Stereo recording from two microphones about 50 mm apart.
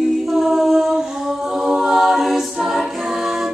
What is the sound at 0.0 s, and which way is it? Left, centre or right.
A capella, centre.